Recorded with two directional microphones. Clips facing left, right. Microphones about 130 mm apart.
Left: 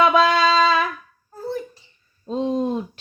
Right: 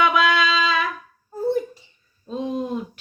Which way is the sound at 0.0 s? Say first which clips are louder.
Left 3 dB; 30° left (ahead or behind).